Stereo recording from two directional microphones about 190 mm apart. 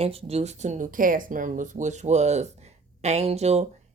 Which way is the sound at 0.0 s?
30° right (ahead or behind).